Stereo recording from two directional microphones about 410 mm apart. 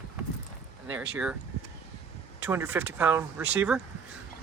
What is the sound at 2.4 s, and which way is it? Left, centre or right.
Speech, centre.